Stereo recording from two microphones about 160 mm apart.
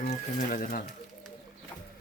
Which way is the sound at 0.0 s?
45° left (ahead or behind).